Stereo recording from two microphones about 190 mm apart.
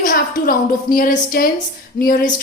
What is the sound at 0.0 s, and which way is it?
A woman's voice, 45° left (ahead or behind).